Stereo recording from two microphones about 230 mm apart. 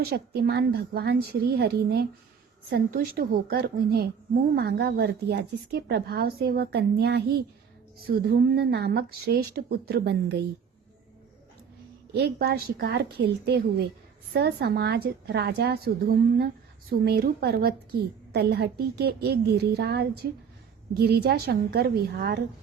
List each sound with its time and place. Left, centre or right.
0.0 s a woman's voice: right
12.1 s a woman's voice: right